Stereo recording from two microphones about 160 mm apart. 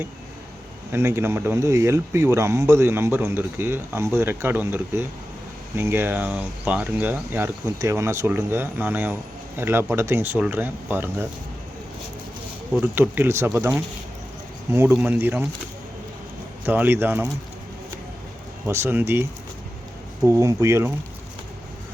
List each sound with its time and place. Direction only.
0.9 s speech: 15° right (ahead or behind)
13.0 s speech: 15° right (ahead or behind)
16.6 s speech: 10° right (ahead or behind)
18.6 s speech: 15° right (ahead or behind)